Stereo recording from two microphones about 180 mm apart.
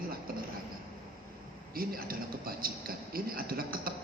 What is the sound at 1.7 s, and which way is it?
Speech, 55° right (ahead or behind).